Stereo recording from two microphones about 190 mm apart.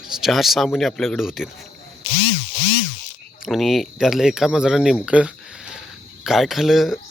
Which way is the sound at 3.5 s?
Centre (ahead or behind).